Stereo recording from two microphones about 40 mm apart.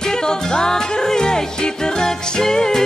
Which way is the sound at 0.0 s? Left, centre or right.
Centre.